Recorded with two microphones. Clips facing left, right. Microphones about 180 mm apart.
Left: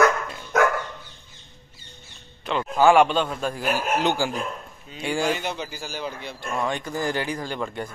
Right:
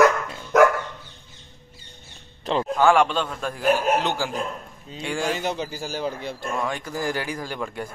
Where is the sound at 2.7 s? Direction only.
5° left (ahead or behind).